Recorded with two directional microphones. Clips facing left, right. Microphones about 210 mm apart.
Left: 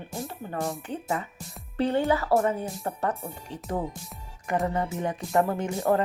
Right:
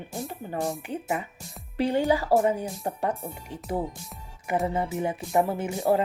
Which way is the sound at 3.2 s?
5° right (ahead or behind).